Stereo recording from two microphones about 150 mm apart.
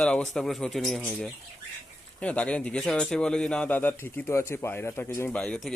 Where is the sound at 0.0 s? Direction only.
5° left (ahead or behind).